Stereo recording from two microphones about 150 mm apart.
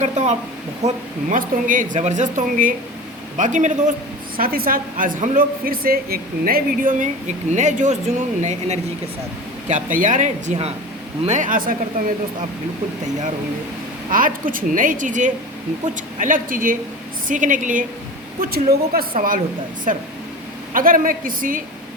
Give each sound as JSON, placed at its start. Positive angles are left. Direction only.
{"t": 0.0, "sound": "speech", "side_deg": -50}
{"t": 4.4, "sound": "a woman's voice", "side_deg": -75}
{"t": 9.6, "sound": "speech", "side_deg": -60}
{"t": 14.1, "sound": "speech", "side_deg": -65}
{"t": 18.3, "sound": "speech", "side_deg": -90}
{"t": 19.9, "sound": "a woman's voice", "side_deg": -60}